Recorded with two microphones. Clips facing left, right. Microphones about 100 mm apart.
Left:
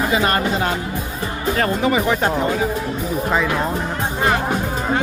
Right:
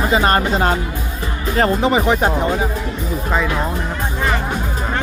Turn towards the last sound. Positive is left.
turn(degrees=0)  # may be behind; listen again after turning